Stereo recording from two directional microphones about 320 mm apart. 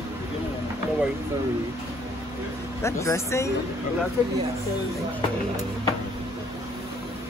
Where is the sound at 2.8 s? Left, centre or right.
Centre.